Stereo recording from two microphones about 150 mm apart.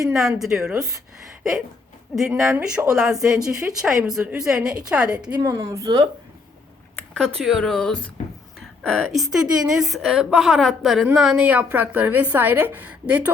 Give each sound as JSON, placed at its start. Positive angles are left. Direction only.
{"t": 0.1, "sound": "a woman's voice", "side_deg": 0}
{"t": 2.1, "sound": "a woman's voice", "side_deg": 0}
{"t": 5.4, "sound": "a woman's voice", "side_deg": -20}
{"t": 7.1, "sound": "a woman's voice", "side_deg": 5}